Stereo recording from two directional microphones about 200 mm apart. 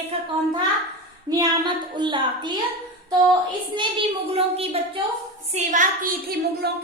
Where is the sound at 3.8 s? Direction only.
25° right (ahead or behind).